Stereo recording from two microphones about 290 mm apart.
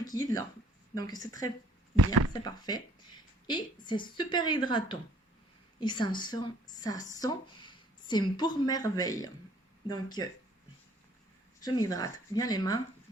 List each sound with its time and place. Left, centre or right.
0.1 s a woman's voice: centre
11.6 s speech: centre